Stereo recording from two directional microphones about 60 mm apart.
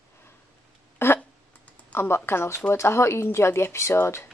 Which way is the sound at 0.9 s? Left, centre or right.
Left.